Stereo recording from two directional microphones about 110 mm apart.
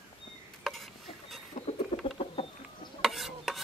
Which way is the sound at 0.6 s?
Centre (ahead or behind).